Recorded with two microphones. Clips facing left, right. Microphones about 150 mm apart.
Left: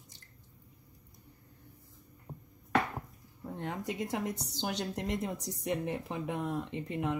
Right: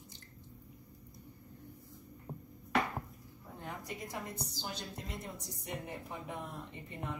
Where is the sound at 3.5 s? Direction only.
85° left.